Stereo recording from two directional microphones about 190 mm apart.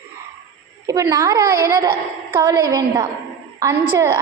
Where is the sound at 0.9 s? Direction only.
15° right (ahead or behind).